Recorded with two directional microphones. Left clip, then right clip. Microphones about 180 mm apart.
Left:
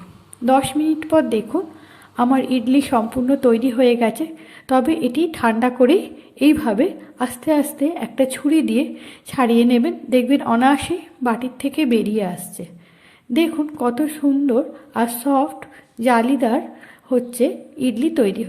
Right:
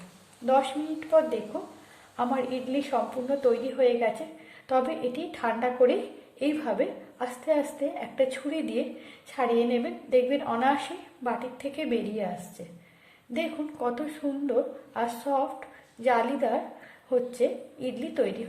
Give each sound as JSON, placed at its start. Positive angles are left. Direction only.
{"t": 0.4, "sound": "a woman's voice", "side_deg": 35}
{"t": 13.3, "sound": "a woman's voice", "side_deg": 35}